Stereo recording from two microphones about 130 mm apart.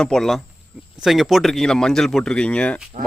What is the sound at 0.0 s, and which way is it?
A man's voice, 5° left (ahead or behind).